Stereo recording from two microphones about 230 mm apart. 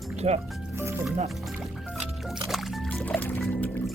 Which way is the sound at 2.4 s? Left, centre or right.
Centre.